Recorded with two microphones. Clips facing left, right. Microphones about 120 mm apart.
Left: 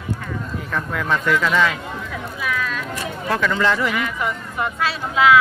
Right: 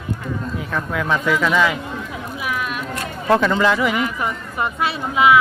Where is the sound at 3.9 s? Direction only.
25° right (ahead or behind).